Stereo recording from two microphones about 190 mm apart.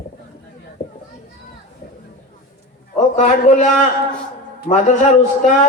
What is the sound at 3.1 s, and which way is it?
Speech, 40° left (ahead or behind).